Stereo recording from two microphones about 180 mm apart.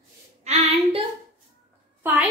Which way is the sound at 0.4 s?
35° right (ahead or behind).